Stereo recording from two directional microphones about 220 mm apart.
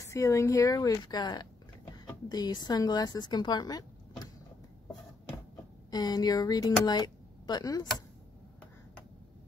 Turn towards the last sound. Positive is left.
turn(degrees=15)  # may be behind; listen again after turning